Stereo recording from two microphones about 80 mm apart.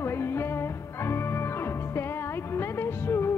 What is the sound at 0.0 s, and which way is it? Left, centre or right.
Music, left.